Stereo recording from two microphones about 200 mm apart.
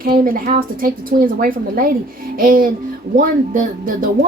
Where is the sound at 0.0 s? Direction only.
45° right (ahead or behind).